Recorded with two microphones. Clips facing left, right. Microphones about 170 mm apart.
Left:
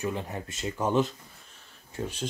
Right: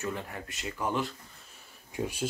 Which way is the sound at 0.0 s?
20° left (ahead or behind).